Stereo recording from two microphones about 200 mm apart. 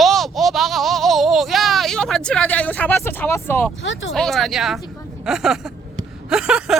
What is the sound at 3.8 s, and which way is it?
Speech, 75° left (ahead or behind).